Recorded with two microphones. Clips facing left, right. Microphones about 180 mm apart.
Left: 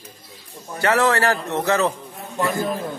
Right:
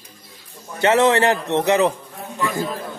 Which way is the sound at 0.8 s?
20° right (ahead or behind).